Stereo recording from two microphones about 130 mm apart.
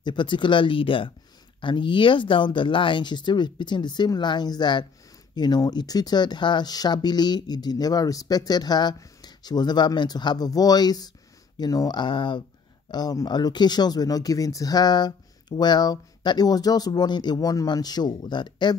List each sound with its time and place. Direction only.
0.0 s speech: 35° left (ahead or behind)